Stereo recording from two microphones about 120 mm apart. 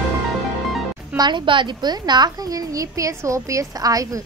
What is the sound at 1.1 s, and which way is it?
A woman's voice, 40° right (ahead or behind).